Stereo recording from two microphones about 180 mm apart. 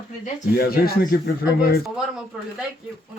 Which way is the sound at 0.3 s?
55° left (ahead or behind).